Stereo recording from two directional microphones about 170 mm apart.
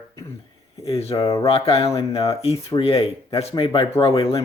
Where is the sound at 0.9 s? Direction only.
35° left (ahead or behind).